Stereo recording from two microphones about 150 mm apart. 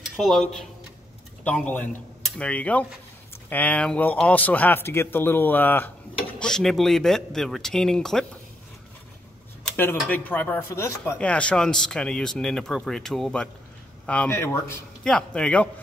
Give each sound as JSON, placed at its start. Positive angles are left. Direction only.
{"t": 0.0, "sound": "a man's voice", "side_deg": 0}
{"t": 6.4, "sound": "speech", "side_deg": 0}
{"t": 10.0, "sound": "a man's voice", "side_deg": 10}
{"t": 15.0, "sound": "a man's voice", "side_deg": 5}